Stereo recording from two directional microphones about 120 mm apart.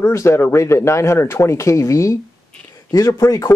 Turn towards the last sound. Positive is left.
turn(degrees=30)  # may be behind; listen again after turning